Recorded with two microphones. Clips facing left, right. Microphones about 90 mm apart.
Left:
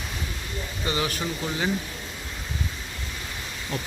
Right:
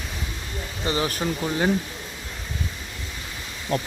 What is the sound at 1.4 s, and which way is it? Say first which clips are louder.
Speech: right 4 dB; 45° right (ahead or behind).